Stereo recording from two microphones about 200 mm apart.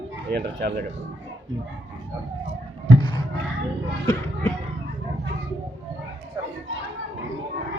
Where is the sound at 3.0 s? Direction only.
25° left (ahead or behind).